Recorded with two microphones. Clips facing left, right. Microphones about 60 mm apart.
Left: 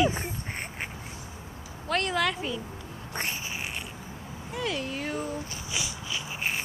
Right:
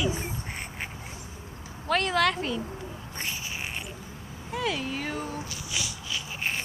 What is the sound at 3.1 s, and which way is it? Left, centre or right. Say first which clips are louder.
Cat: left 4 dB; left.